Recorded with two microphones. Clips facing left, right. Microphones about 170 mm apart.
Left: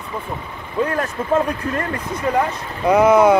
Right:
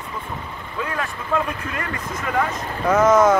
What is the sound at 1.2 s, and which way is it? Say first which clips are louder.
Speech: left 9 dB; 45° left (ahead or behind).